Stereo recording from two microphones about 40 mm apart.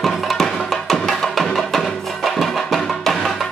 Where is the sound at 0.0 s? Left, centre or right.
Centre.